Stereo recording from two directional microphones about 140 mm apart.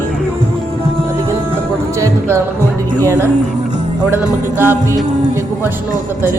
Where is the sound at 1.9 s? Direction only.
20° right (ahead or behind).